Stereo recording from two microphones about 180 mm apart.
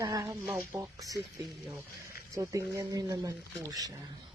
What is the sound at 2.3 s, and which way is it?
Speech, 20° right (ahead or behind).